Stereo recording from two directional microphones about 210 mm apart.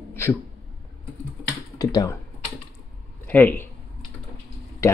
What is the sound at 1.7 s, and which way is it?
Speech, 15° left (ahead or behind).